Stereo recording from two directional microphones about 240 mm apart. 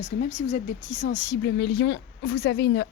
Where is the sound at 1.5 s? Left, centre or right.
Left.